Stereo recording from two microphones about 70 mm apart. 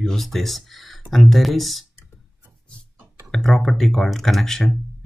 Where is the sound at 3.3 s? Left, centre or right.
Centre.